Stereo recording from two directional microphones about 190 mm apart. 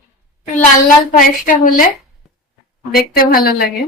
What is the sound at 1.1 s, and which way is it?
Speech, 45° left (ahead or behind).